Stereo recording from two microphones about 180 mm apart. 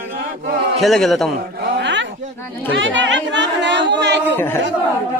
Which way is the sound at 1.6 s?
75° right (ahead or behind).